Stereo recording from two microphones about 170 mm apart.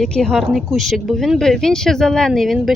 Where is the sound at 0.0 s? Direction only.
5° left (ahead or behind).